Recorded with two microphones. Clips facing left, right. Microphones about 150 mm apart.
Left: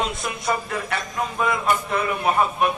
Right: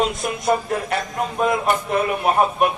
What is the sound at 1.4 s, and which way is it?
Speech, 45° right (ahead or behind).